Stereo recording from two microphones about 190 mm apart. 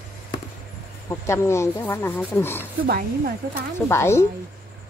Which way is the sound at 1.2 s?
15° left (ahead or behind).